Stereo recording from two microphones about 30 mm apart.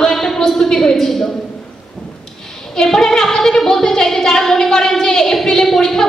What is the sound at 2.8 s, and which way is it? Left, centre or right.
Female singing, centre.